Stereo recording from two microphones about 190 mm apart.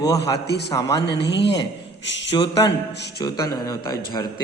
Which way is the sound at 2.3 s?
20° left (ahead or behind).